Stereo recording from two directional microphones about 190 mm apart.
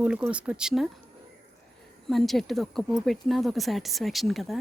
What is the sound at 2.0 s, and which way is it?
Speech, centre (ahead or behind).